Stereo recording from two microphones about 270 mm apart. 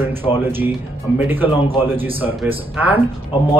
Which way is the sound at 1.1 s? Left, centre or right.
Centre.